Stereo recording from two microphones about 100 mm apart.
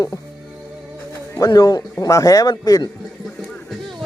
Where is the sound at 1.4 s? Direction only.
35° left (ahead or behind).